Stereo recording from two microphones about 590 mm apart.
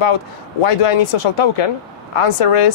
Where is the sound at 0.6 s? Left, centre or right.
Left.